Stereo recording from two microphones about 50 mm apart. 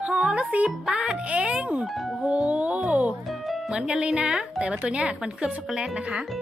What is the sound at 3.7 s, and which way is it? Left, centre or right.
A woman's voice, centre.